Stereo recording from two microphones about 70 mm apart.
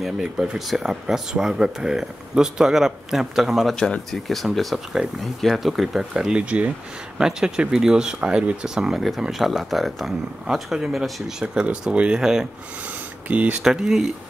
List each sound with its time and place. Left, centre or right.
0.0 s speech: centre
3.7 s speech: centre
13.3 s speech: right
13.7 s speech: centre